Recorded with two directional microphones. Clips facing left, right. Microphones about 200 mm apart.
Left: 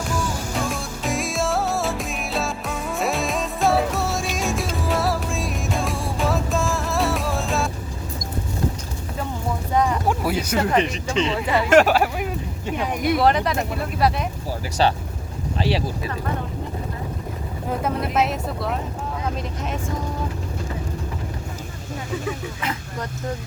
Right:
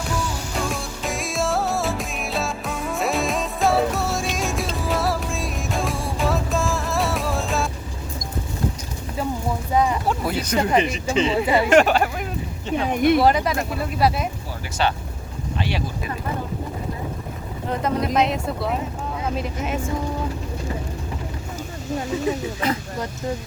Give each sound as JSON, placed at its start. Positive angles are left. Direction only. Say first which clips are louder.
{"t": 0.6, "sound": "music", "louder": "even", "side_deg": 0}
{"t": 9.7, "sound": "boat", "louder": "right 1 dB", "side_deg": -10}
{"t": 10.1, "sound": "a sound", "louder": "left 1 dB", "side_deg": 10}
{"t": 10.7, "sound": "speech", "louder": "right 1 dB", "side_deg": -5}
{"t": 11.7, "sound": "speech", "louder": "left 3 dB", "side_deg": 5}
{"t": 13.1, "sound": "speech", "louder": "right 1 dB", "side_deg": 0}
{"t": 14.8, "sound": "speech", "louder": "left 2 dB", "side_deg": 35}
{"t": 17.7, "sound": "speech", "louder": "right 2 dB", "side_deg": 5}
{"t": 22.3, "sound": "speech", "louder": "right 5 dB", "side_deg": -35}